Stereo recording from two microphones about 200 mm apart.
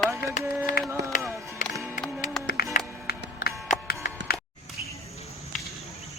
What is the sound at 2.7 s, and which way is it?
Music, 45° left (ahead or behind).